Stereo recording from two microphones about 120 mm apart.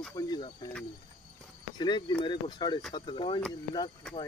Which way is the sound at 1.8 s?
40° left (ahead or behind).